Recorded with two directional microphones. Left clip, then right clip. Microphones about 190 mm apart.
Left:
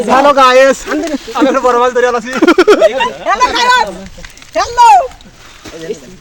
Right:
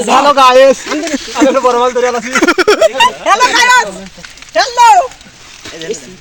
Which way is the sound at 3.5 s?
35° right (ahead or behind).